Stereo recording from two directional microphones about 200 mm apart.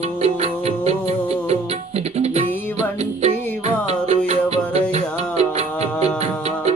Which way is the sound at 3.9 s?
30° right (ahead or behind).